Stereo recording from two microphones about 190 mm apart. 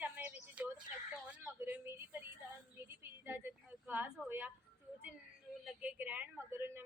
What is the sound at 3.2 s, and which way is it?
A woman's voice, 10° right (ahead or behind).